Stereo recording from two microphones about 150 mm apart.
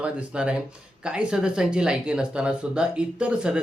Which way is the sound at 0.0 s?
5° right (ahead or behind).